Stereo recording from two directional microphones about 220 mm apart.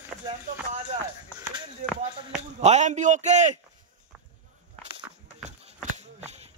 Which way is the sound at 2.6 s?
30° right (ahead or behind).